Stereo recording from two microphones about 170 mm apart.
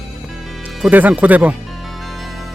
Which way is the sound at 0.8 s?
10° right (ahead or behind).